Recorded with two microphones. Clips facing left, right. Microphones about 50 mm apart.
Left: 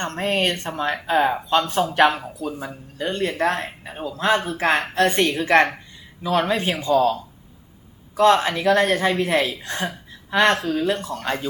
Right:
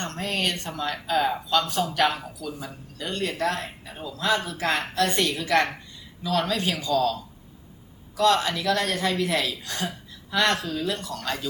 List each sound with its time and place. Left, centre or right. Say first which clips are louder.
0.0 s speech: left 6 dB; left